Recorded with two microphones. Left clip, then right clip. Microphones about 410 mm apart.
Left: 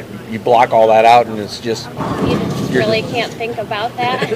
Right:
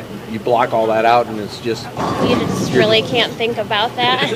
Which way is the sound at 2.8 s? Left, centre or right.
Right.